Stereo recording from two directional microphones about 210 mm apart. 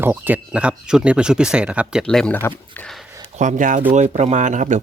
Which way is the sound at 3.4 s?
35° right (ahead or behind).